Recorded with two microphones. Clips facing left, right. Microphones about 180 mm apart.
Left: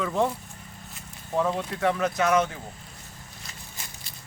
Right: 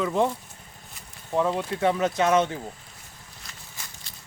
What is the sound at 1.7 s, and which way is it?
Speech, 25° right (ahead or behind).